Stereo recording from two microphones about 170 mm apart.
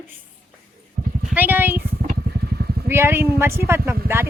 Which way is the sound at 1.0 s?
45° right (ahead or behind).